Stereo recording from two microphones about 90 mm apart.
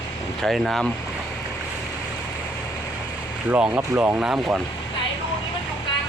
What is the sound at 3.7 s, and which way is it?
Speech, 25° right (ahead or behind).